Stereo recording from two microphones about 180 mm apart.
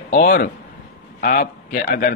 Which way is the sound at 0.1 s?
50° left (ahead or behind).